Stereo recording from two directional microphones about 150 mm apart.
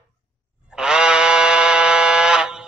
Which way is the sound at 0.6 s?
5° right (ahead or behind).